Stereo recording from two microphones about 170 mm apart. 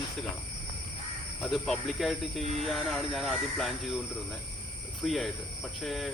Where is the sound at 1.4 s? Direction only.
Centre (ahead or behind).